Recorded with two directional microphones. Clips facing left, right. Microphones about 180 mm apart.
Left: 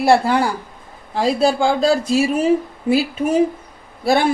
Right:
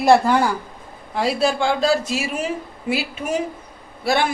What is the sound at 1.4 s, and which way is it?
Speech, 35° left (ahead or behind).